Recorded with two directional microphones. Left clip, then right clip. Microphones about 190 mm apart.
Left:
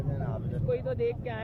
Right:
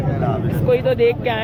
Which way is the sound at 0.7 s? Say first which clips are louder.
Right 14 dB; centre (ahead or behind).